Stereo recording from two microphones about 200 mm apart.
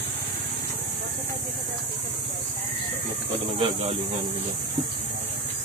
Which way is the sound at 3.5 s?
30° right (ahead or behind).